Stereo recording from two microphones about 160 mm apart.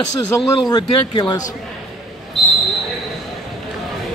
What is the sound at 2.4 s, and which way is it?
Basketball bounce, centre (ahead or behind).